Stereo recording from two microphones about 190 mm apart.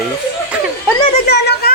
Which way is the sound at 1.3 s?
60° left (ahead or behind).